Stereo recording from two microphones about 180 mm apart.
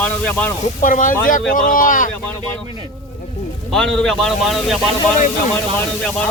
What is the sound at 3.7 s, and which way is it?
A man's voice, 5° left (ahead or behind).